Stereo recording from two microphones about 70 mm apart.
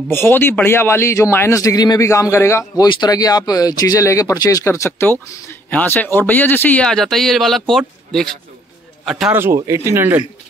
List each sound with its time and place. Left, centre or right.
0.1 s a man's voice: left
1.5 s a man's voice: left
2.7 s speech: left
4.0 s speech: left
4.6 s a man's voice: left
5.7 s speech: left
6.8 s speech: centre
9.3 s speech: right